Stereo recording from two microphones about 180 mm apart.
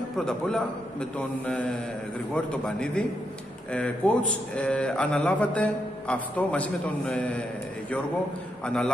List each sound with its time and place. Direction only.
0.2 s a man's voice: 5° left (ahead or behind)
8.6 s a man's voice: 5° left (ahead or behind)